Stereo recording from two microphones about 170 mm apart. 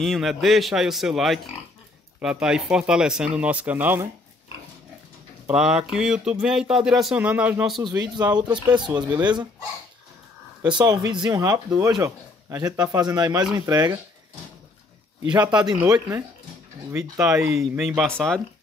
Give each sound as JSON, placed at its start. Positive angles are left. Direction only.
{"t": 0.0, "sound": "speech", "side_deg": 0}
{"t": 5.5, "sound": "speech", "side_deg": -5}
{"t": 8.2, "sound": "speech", "side_deg": -25}
{"t": 10.6, "sound": "speech", "side_deg": -25}
{"t": 15.4, "sound": "speech", "side_deg": -25}
{"t": 17.5, "sound": "speech", "side_deg": 0}